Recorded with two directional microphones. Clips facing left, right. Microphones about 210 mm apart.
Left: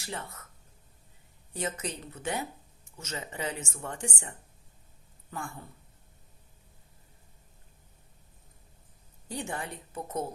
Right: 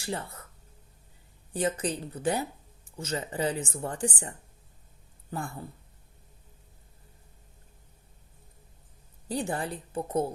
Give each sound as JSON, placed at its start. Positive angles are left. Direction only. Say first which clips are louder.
{"t": 0.0, "sound": "speech", "louder": "right 5 dB", "side_deg": -30}
{"t": 1.5, "sound": "speech", "louder": "right 6 dB", "side_deg": -30}
{"t": 9.3, "sound": "speech", "louder": "right 5 dB", "side_deg": -35}